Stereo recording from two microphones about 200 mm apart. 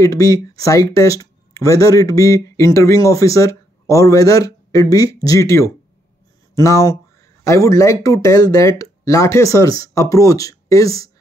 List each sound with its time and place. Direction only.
0.0 s speech: 15° left (ahead or behind)